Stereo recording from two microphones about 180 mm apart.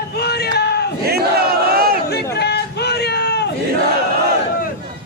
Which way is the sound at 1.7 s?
55° right (ahead or behind).